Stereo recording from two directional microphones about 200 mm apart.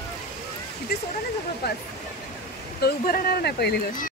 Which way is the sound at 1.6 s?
55° left (ahead or behind).